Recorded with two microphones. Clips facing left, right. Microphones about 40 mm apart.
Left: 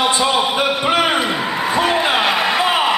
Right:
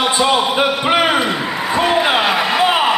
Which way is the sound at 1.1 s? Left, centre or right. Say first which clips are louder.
Right 1 dB; centre.